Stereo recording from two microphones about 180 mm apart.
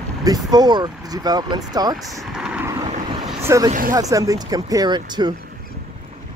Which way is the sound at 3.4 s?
15° right (ahead or behind).